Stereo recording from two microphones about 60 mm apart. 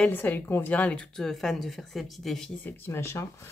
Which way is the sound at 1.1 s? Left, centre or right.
Centre.